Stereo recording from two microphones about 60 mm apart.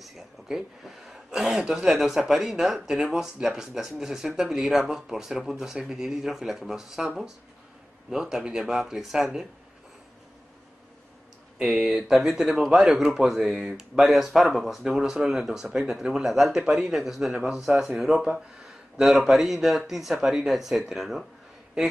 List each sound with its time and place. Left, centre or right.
0.0 s a sound: centre
1.6 s speech: centre
8.1 s speech: centre
11.6 s speech: centre
13.7 s speech: centre
14.1 s speech: centre